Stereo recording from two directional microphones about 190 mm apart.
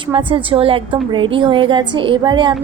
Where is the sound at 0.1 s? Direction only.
25° right (ahead or behind).